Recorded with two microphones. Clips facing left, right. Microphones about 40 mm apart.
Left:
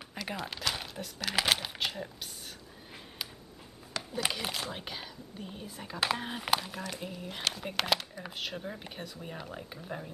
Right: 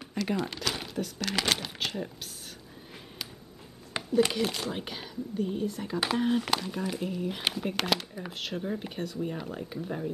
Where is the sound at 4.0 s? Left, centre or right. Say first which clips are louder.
Right 3 dB; right.